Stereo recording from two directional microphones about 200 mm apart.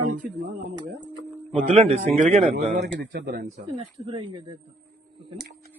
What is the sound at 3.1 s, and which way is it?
Speech, 55° right (ahead or behind).